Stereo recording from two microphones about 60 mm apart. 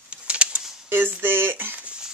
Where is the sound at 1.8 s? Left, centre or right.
Centre.